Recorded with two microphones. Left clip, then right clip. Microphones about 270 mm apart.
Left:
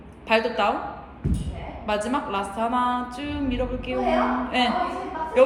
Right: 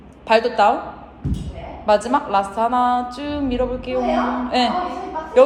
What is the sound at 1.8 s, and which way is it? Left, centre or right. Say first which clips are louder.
A woman's voice: right 9 dB; centre.